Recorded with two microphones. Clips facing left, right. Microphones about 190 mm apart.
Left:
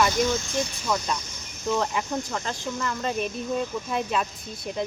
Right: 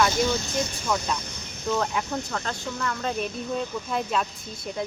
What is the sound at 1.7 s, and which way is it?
Speech, centre (ahead or behind).